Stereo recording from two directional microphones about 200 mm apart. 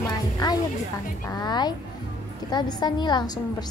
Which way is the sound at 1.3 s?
20° left (ahead or behind).